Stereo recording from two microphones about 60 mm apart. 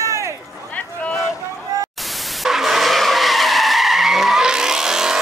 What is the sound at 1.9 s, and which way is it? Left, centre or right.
Skidding, centre.